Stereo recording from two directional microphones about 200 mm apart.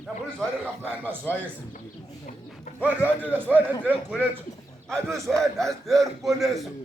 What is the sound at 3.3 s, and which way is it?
Speech, 10° right (ahead or behind).